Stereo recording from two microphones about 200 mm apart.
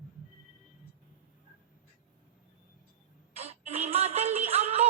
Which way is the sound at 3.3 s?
30° right (ahead or behind).